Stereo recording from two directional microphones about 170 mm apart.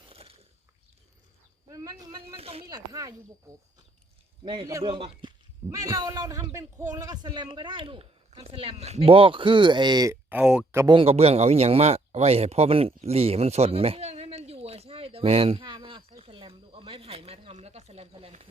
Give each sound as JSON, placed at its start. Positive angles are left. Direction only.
{"t": 0.1, "sound": "biting", "side_deg": -35}
{"t": 1.7, "sound": "a sound", "side_deg": -20}
{"t": 2.3, "sound": "speech", "side_deg": -35}
{"t": 2.6, "sound": "a man's voice", "side_deg": -20}
{"t": 4.4, "sound": "a man's voice", "side_deg": -25}
{"t": 10.2, "sound": "speech", "side_deg": -5}
{"t": 10.8, "sound": "a man's voice", "side_deg": -25}
{"t": 11.0, "sound": "a sound", "side_deg": -35}